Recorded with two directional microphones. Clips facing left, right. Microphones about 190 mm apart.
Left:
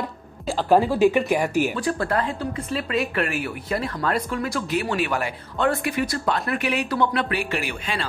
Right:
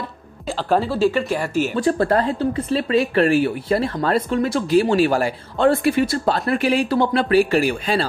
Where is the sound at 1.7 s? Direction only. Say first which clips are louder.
Right 6 dB; 30° right (ahead or behind).